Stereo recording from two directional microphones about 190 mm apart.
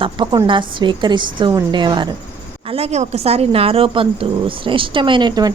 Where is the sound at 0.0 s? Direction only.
25° right (ahead or behind).